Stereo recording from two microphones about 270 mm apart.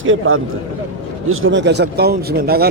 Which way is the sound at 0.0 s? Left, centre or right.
Right.